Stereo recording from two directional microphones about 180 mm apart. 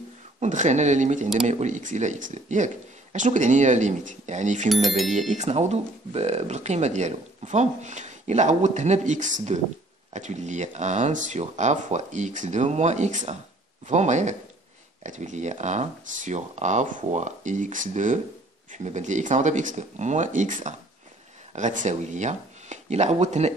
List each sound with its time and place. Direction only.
0.4 s speech: 40° right (ahead or behind)
4.8 s speech: centre (ahead or behind)
5.3 s speech: 40° right (ahead or behind)